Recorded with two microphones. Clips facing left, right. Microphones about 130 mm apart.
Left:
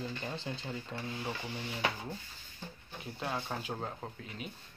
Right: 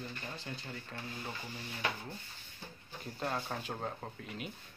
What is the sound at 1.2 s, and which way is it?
Speech, 80° left.